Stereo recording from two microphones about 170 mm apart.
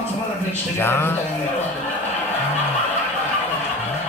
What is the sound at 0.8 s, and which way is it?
Speech, 15° left (ahead or behind).